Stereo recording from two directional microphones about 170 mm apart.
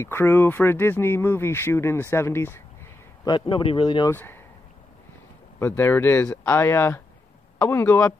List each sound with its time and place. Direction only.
0.0 s speech: 15° left (ahead or behind)
3.3 s speech: 30° left (ahead or behind)
4.1 s speech: 15° left (ahead or behind)
5.6 s speech: 10° left (ahead or behind)